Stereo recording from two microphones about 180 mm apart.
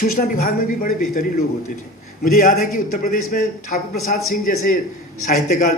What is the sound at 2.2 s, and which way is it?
A man's voice, 50° left (ahead or behind).